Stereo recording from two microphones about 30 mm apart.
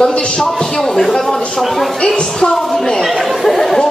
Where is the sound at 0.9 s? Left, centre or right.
Centre.